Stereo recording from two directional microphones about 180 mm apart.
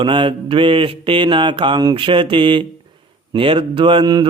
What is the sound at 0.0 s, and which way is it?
Mantra, 30° right (ahead or behind).